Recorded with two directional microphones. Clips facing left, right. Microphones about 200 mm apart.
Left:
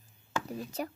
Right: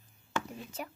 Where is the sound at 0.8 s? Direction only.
40° left (ahead or behind).